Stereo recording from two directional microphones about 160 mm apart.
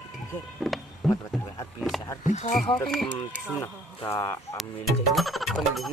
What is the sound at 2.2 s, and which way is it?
Frog, 45° left (ahead or behind).